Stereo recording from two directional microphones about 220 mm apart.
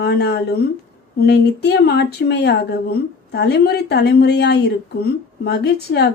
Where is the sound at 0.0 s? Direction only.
50° left (ahead or behind).